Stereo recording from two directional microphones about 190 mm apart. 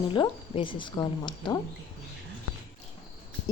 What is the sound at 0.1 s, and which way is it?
A woman's voice, 25° left (ahead or behind).